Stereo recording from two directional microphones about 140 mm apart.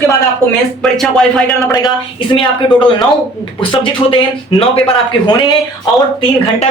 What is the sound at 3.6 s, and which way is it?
Speech, 35° left (ahead or behind).